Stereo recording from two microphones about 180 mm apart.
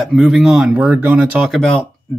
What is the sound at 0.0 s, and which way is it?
Speech, centre (ahead or behind).